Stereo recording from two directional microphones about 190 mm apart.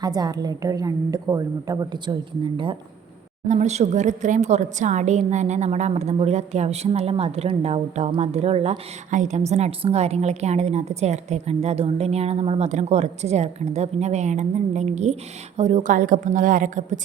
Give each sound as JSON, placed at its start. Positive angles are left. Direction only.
{"t": 0.0, "sound": "a woman's voice", "side_deg": -20}
{"t": 3.5, "sound": "a woman's voice", "side_deg": -35}